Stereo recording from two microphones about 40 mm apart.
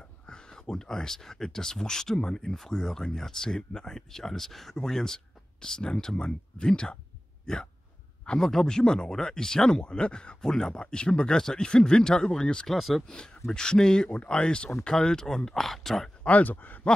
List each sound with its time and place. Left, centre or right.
0.3 s speech: centre
8.4 s speech: centre
10.4 s speech: centre
10.7 s speech: left
12.7 s speech: centre
13.1 s speech: left; by 16.1 s centre
16.3 s speech: left